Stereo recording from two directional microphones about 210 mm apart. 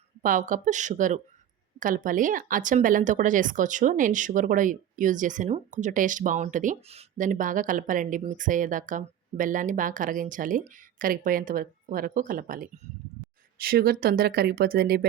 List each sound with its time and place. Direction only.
0.2 s speech: 40° right (ahead or behind)